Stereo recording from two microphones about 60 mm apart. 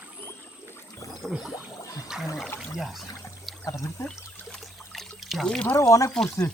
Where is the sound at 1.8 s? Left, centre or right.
Left.